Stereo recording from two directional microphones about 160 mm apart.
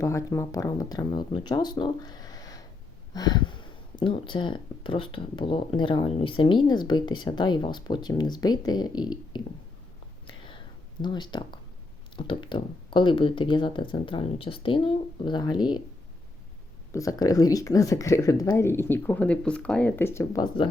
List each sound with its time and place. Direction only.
0.0 s speech: 20° left (ahead or behind)
10.2 s whispering: 30° left (ahead or behind)
11.0 s speech: 30° left (ahead or behind)
16.9 s speech: 20° left (ahead or behind)